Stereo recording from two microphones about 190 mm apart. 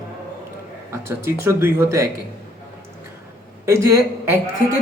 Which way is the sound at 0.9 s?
15° right (ahead or behind).